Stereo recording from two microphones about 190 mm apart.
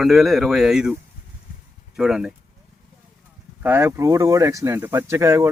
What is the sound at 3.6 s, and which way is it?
Speech, 10° right (ahead or behind).